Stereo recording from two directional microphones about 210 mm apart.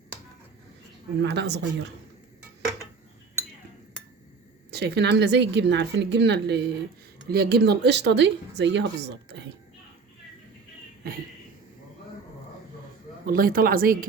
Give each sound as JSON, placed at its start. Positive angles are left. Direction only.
{"t": 1.2, "sound": "speech", "side_deg": -55}
{"t": 4.7, "sound": "speech", "side_deg": -50}
{"t": 13.2, "sound": "speech", "side_deg": -45}